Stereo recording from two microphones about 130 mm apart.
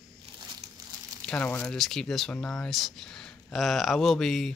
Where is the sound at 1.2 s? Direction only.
10° left (ahead or behind).